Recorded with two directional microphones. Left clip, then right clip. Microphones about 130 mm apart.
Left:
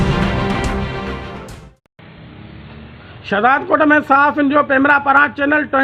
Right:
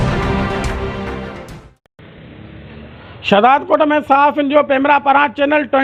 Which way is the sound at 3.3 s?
25° right (ahead or behind).